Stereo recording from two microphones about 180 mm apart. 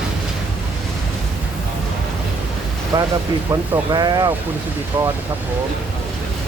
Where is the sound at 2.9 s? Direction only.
20° right (ahead or behind).